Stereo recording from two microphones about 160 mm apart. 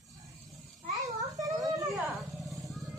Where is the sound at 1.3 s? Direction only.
20° right (ahead or behind).